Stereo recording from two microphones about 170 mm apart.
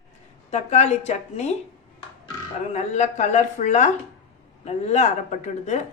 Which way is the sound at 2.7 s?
45° left (ahead or behind).